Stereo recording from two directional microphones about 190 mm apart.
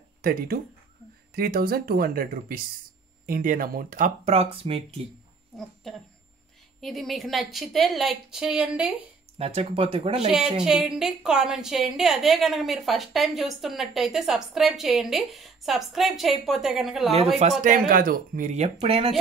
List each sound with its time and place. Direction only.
0.2 s speech: 50° right (ahead or behind); by 5.0 s 30° right (ahead or behind)
5.9 s a woman's voice: centre (ahead or behind)
9.4 s speech: 30° right (ahead or behind)
10.6 s a woman's voice: 5° right (ahead or behind)
17.6 s speech: 50° right (ahead or behind); by 19.1 s 30° right (ahead or behind)